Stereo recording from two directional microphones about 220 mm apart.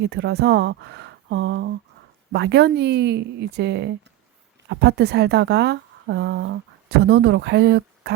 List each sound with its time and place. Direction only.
0.0 s a woman's voice: 50° right (ahead or behind)